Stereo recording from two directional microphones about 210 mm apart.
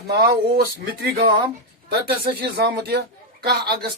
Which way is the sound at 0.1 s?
50° right (ahead or behind).